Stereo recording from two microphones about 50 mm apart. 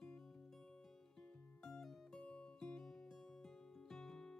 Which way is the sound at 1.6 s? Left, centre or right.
Centre.